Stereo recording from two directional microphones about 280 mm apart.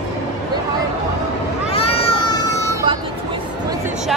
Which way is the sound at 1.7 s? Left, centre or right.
Left.